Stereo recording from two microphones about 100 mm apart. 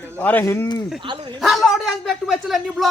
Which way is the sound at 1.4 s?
Centre (ahead or behind).